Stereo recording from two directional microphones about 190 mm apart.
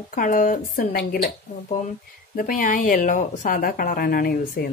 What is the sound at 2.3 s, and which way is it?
A woman's voice, 45° left (ahead or behind).